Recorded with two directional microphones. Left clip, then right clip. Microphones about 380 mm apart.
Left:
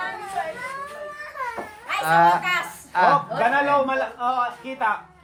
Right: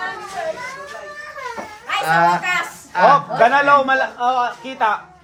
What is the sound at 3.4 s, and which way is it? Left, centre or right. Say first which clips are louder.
Speech: right 7 dB; right.